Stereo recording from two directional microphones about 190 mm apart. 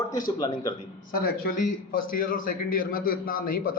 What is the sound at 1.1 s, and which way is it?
A man's voice, 50° left (ahead or behind).